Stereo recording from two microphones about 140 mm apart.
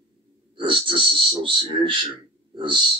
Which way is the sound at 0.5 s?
35° right (ahead or behind).